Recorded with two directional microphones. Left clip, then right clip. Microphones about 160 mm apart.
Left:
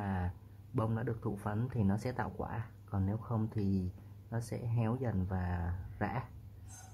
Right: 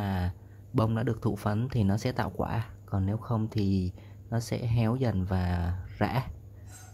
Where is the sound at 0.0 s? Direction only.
20° right (ahead or behind).